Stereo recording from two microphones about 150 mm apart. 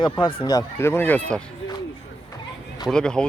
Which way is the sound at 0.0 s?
30° left (ahead or behind).